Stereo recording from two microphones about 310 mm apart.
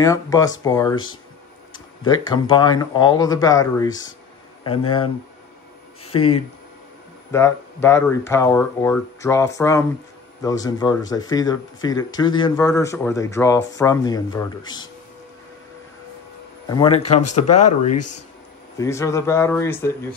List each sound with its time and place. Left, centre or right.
0.0 s speech: centre
2.0 s speech: centre
6.1 s speech: centre
16.6 s speech: centre
17.1 s speech: left
18.8 s speech: centre